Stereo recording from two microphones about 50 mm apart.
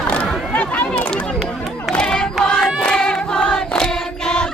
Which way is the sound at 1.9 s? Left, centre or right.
Centre.